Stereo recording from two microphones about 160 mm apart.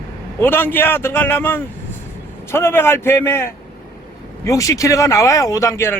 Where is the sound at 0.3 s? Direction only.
15° left (ahead or behind).